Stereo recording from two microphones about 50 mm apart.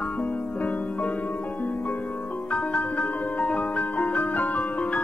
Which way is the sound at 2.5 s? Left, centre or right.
Left.